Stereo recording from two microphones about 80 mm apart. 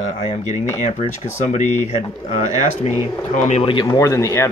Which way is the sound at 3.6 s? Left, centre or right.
Left.